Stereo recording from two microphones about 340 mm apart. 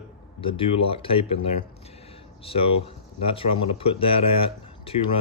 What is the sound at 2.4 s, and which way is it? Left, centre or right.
Speech, centre.